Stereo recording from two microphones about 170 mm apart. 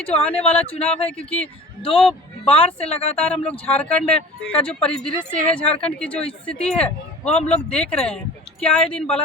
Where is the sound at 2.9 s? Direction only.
35° left (ahead or behind).